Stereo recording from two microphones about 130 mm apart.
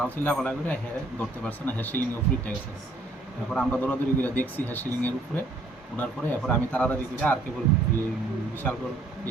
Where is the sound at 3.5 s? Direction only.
10° left (ahead or behind).